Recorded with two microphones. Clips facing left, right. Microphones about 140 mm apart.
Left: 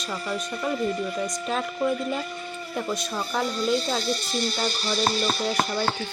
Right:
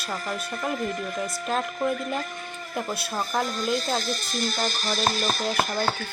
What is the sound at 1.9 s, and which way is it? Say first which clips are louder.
Speech: left 1 dB; 50° right (ahead or behind).